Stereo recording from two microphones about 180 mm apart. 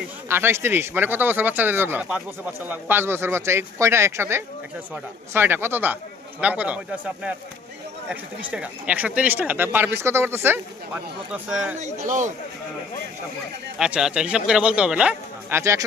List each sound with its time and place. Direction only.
0.3 s speech: 15° right (ahead or behind)
11.8 s a man's voice: 40° right (ahead or behind)
13.7 s speech: 5° right (ahead or behind)